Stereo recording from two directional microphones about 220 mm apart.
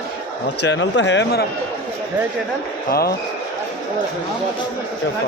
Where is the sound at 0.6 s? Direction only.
55° left (ahead or behind).